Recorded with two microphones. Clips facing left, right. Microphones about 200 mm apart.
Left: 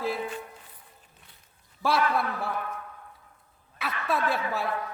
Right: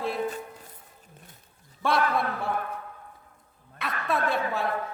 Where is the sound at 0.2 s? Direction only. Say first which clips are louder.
Right 4 dB; 40° right (ahead or behind).